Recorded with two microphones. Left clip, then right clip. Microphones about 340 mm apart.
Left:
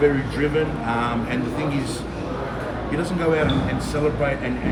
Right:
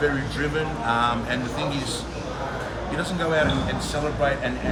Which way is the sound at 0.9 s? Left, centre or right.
Centre.